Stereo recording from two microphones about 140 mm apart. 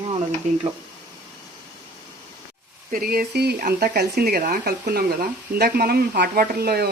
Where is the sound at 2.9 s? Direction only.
90° right.